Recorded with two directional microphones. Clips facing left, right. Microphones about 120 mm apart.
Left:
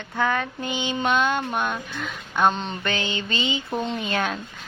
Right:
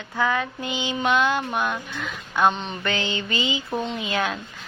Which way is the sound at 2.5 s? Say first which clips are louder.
Left 1 dB; 35° left (ahead or behind).